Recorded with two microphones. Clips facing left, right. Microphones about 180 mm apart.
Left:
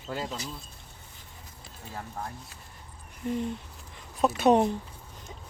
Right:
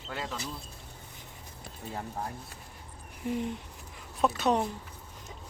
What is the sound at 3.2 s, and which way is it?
Speech, 10° right (ahead or behind).